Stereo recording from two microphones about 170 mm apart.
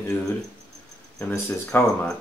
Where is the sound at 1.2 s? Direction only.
15° left (ahead or behind).